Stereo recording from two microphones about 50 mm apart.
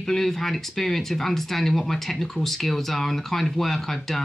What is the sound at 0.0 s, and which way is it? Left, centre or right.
Speech, centre.